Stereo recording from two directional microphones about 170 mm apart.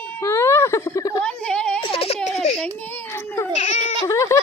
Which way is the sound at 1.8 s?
35° left (ahead or behind).